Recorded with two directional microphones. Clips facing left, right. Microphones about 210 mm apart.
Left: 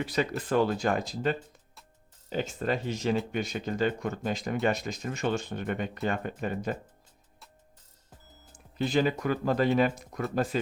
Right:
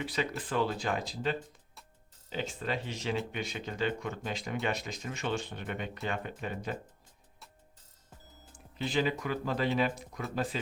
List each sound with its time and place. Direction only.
0.0 s speech: 40° left (ahead or behind)
8.8 s speech: 45° left (ahead or behind)